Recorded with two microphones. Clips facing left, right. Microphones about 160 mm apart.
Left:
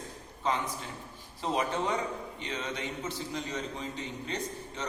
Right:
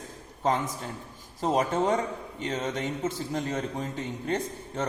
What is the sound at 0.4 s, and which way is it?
A man's voice, 45° right (ahead or behind).